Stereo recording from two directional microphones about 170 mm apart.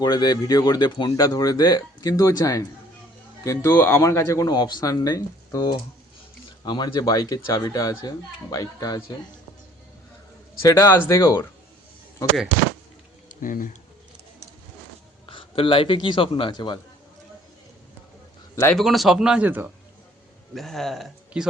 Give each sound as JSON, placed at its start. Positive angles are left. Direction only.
{"t": 0.0, "sound": "speech", "side_deg": 25}
{"t": 10.6, "sound": "speech", "side_deg": 20}
{"t": 13.2, "sound": "a sound", "side_deg": 55}
{"t": 15.3, "sound": "a man's voice", "side_deg": 30}
{"t": 18.5, "sound": "speech", "side_deg": 15}
{"t": 18.8, "sound": "speech", "side_deg": 0}
{"t": 20.5, "sound": "speech", "side_deg": 0}